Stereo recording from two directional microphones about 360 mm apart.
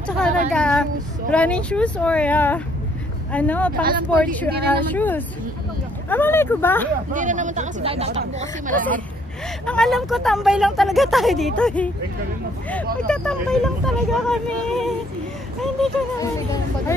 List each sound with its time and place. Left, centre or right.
0.5 s speech: centre
7.2 s speech: right
9.7 s speech: centre
13.0 s speech: centre